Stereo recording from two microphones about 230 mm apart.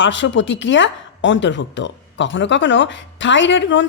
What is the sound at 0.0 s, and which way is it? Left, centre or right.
Speech, left.